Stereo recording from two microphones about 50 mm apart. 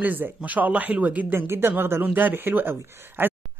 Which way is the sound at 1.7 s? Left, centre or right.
Right.